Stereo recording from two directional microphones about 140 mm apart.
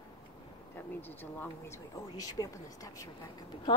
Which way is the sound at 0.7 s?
15° left (ahead or behind).